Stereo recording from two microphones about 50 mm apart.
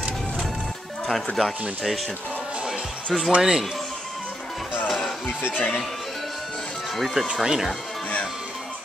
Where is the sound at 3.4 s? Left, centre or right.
Centre.